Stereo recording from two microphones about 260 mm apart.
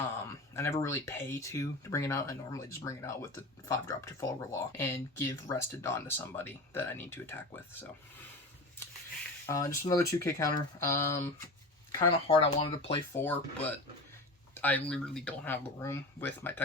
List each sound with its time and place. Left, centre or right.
0.5 s speech: centre
9.5 s speech: centre
13.1 s speech: centre